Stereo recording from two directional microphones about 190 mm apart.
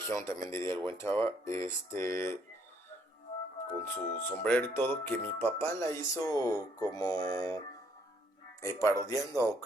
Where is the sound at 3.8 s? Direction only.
10° left (ahead or behind).